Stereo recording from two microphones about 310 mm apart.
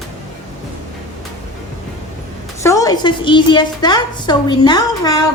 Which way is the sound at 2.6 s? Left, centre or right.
Centre.